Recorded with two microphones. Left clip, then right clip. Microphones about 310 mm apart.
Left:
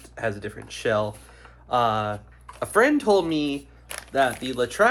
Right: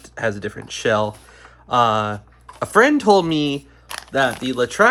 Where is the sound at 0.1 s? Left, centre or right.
Right.